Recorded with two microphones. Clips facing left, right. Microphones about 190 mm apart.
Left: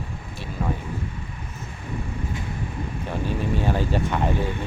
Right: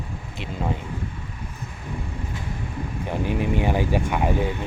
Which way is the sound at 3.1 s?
15° right (ahead or behind).